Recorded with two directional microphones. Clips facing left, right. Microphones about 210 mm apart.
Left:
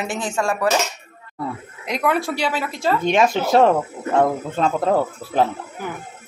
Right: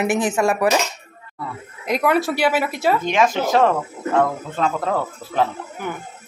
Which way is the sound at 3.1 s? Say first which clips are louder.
Left 4 dB; 25° left (ahead or behind).